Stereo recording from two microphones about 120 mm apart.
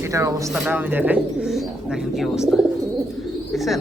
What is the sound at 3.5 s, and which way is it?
Bird, centre (ahead or behind).